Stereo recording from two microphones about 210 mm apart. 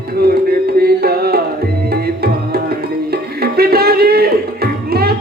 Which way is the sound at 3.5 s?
45° right (ahead or behind).